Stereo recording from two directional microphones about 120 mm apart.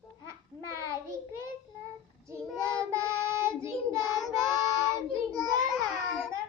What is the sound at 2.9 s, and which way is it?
Child singing, 25° right (ahead or behind).